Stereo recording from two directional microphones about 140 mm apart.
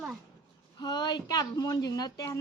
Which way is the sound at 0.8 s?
30° left (ahead or behind).